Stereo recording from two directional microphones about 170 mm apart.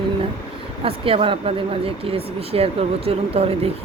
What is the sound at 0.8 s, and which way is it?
Speech, 35° right (ahead or behind).